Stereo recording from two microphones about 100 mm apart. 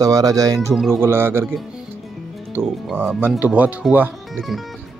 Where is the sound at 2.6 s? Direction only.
25° right (ahead or behind).